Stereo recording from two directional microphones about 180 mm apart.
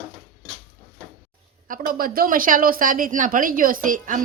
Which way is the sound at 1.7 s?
50° right (ahead or behind).